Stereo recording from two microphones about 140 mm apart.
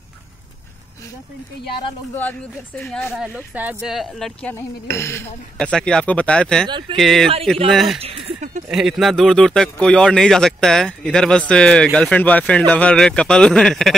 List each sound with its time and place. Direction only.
2.1 s speech: 10° left (ahead or behind)
4.6 s speech: 20° left (ahead or behind)
5.6 s speech: 5° left (ahead or behind)
8.0 s a sound: 45° right (ahead or behind)
8.6 s speech: 5° right (ahead or behind)